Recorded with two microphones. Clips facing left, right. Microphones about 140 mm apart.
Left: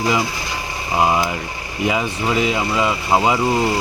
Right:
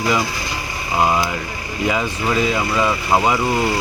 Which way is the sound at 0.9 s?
15° left (ahead or behind).